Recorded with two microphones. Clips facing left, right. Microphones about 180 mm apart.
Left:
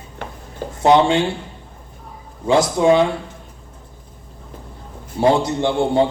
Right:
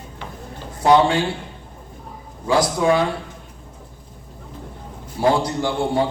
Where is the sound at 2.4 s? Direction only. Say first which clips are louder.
Left 3 dB; 25° left (ahead or behind).